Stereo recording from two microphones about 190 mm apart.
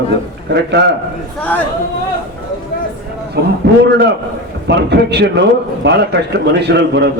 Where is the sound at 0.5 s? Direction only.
60° right (ahead or behind).